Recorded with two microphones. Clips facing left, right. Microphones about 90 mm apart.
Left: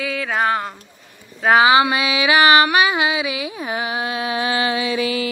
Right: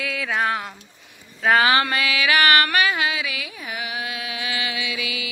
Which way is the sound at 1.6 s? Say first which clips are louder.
Left 5 dB; 15° left (ahead or behind).